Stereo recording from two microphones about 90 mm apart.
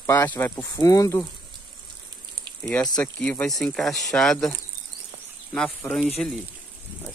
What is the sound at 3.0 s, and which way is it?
Speech, 15° left (ahead or behind).